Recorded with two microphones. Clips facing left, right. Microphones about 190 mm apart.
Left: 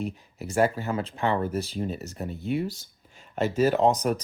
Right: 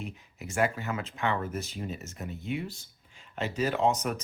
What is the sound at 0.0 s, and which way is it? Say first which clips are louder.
Speech: left 7 dB; 35° left (ahead or behind).